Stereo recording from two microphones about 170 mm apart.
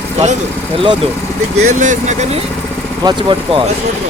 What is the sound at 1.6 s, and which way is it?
Speech, 45° right (ahead or behind).